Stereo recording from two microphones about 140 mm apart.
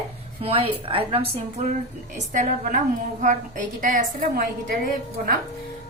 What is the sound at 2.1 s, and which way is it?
A woman's voice, 60° right (ahead or behind).